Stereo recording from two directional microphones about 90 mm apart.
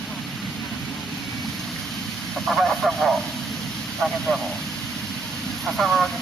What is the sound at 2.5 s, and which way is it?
Speech, centre (ahead or behind).